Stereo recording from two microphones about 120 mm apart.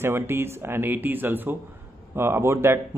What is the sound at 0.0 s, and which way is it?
A man's voice, 20° right (ahead or behind).